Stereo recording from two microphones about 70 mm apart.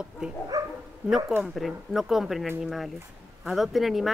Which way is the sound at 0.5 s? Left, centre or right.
Right.